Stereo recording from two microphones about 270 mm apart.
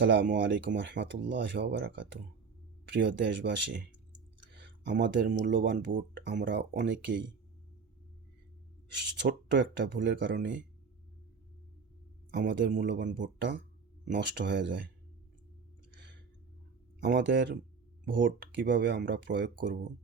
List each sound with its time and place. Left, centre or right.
0.0 s speech: right
4.8 s speech: right
9.2 s speech: right
12.3 s speech: right
17.0 s speech: right